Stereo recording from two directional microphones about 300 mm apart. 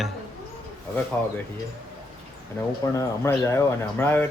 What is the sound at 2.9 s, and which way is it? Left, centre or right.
Speech, centre.